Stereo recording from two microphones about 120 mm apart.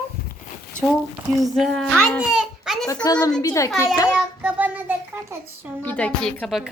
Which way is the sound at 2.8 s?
30° left (ahead or behind).